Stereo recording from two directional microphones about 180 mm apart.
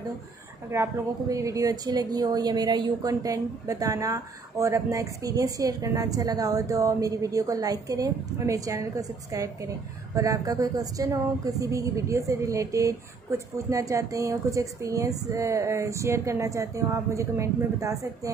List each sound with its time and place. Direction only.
0.7 s a woman's voice: 15° right (ahead or behind)